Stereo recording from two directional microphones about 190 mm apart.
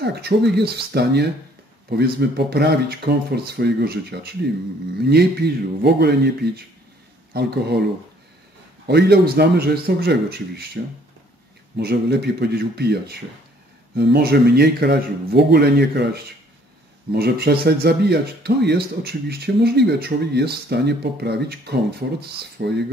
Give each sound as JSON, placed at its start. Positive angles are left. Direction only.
{"t": 0.0, "sound": "speech", "side_deg": -60}
{"t": 8.8, "sound": "speech", "side_deg": -60}
{"t": 22.0, "sound": "speech", "side_deg": -50}
{"t": 22.6, "sound": "speech", "side_deg": -60}